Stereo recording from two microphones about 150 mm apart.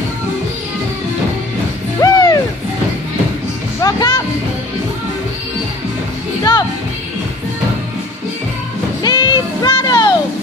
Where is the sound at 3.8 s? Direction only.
25° left (ahead or behind).